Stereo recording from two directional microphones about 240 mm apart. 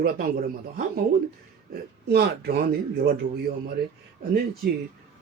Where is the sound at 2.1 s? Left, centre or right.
Right.